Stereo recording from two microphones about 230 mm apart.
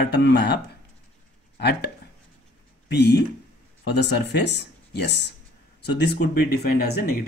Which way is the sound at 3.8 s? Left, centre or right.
Left.